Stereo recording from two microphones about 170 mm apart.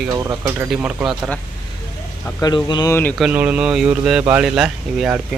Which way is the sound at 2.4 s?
25° left (ahead or behind).